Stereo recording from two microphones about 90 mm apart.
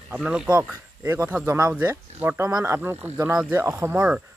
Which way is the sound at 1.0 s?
30° right (ahead or behind).